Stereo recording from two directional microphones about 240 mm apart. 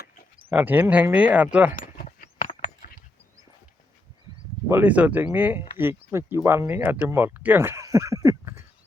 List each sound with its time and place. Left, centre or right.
0.5 s speech: centre
1.7 s a sound: left
4.7 s speech: centre